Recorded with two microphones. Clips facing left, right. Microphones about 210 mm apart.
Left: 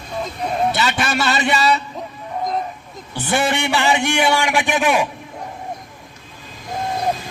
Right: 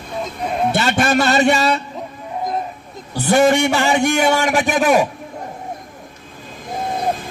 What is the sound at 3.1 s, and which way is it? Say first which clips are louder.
A man's voice: right 7 dB; 40° right (ahead or behind).